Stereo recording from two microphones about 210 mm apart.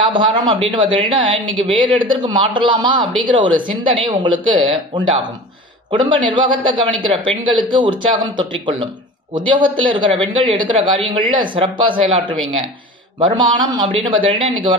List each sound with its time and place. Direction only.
0.0 s speech: 20° right (ahead or behind)